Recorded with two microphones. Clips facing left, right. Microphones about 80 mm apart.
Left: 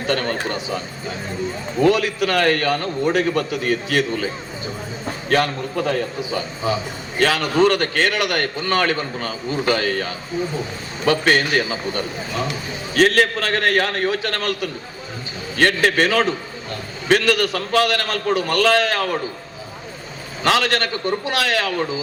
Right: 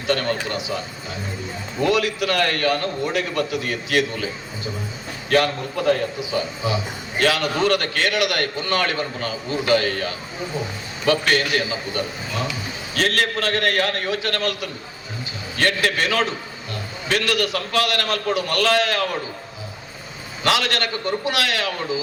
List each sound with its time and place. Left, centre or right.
0.1 s a man's voice: left
1.9 s a man's voice: left
5.3 s a man's voice: left
20.4 s a man's voice: left